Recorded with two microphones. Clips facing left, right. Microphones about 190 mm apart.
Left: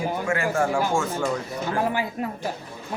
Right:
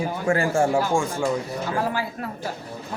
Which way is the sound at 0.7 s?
15° right (ahead or behind).